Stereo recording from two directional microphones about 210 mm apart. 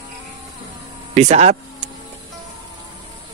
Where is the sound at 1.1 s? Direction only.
30° right (ahead or behind).